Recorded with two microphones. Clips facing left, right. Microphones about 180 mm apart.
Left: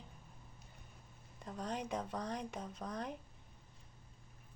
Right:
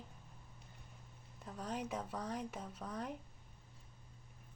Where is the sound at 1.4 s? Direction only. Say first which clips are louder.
Left 1 dB; 5° right (ahead or behind).